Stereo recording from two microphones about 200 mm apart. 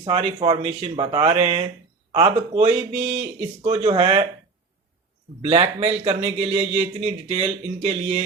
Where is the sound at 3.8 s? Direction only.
25° right (ahead or behind).